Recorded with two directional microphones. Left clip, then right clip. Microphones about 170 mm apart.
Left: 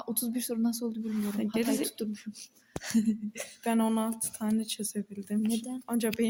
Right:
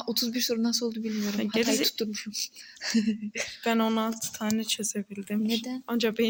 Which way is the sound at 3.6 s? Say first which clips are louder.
Right 3 dB; centre (ahead or behind).